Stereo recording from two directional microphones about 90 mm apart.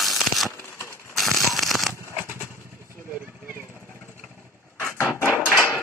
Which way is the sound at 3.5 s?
30° left (ahead or behind).